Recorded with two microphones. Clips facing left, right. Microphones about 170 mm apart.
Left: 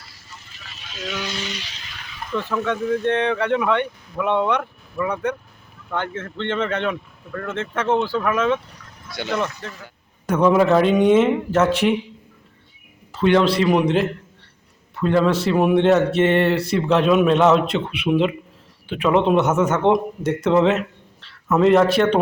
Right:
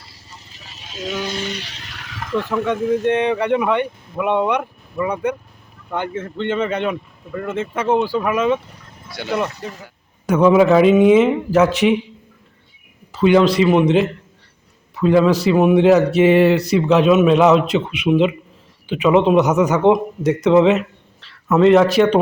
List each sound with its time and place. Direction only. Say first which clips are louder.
0.0 s vehicle: right 1 dB; 35° right (ahead or behind); by 2.3 s 90° right
2.9 s a man's voice: right 3 dB; 15° right (ahead or behind)
13.1 s a man's voice: right 3 dB; 5° right (ahead or behind)